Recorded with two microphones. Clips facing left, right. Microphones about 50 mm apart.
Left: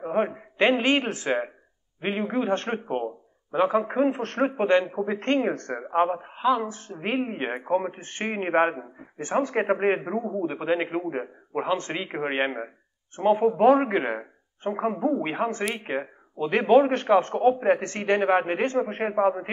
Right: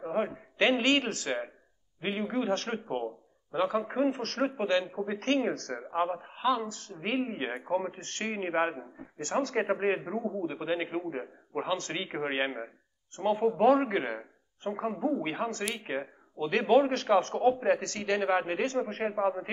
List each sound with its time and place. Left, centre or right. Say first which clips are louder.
0.0 s a man's voice: left 6 dB; left